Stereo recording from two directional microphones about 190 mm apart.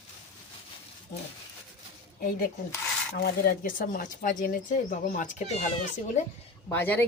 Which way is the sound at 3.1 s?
50° left (ahead or behind).